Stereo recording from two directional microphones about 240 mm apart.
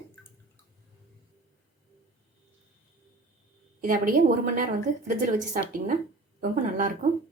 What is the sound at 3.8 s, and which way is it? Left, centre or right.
Speech, right.